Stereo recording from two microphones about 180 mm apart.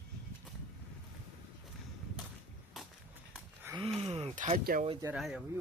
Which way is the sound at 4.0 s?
35° right (ahead or behind).